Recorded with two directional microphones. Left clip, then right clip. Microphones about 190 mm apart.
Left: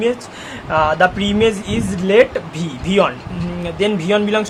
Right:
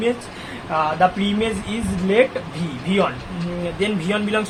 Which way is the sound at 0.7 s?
45° left (ahead or behind).